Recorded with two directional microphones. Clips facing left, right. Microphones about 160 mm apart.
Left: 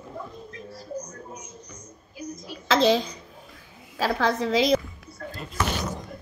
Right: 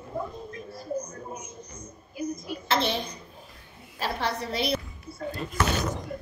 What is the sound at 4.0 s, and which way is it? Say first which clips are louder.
Speech: left 6 dB; 90° left.